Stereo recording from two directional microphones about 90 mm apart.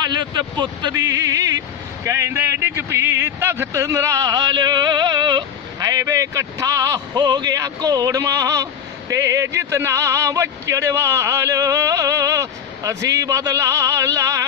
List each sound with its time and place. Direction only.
0.2 s speech: 55° right (ahead or behind)
0.9 s a sound: 40° right (ahead or behind)
2.0 s a man's voice: 35° right (ahead or behind)
7.2 s a man's voice: 50° right (ahead or behind)